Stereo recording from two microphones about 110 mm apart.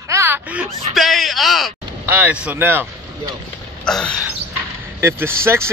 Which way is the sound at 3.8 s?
5° left (ahead or behind).